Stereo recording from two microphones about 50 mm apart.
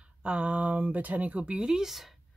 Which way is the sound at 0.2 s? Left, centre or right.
Right.